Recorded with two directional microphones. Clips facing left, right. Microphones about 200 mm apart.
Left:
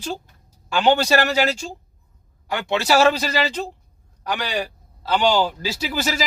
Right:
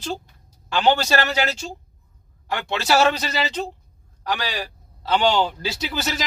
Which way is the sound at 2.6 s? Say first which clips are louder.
Left 2 dB; 15° left (ahead or behind).